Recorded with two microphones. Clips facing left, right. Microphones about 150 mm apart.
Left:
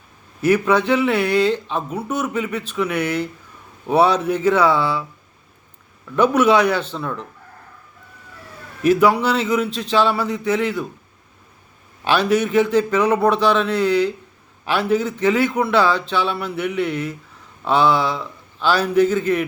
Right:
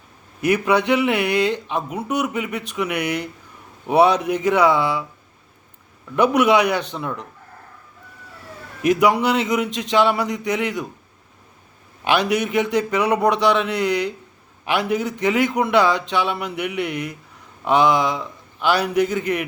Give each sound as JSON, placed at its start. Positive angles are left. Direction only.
{"t": 0.4, "sound": "speech", "side_deg": -15}
{"t": 6.1, "sound": "speech", "side_deg": -15}
{"t": 8.8, "sound": "speech", "side_deg": -15}
{"t": 12.0, "sound": "speech", "side_deg": -15}